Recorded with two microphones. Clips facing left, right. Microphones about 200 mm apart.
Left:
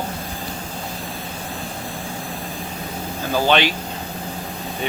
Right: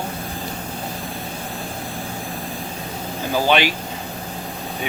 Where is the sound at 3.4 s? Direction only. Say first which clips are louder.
Even; 10° right (ahead or behind).